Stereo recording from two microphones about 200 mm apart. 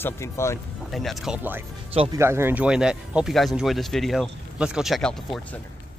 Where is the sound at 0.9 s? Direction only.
Centre (ahead or behind).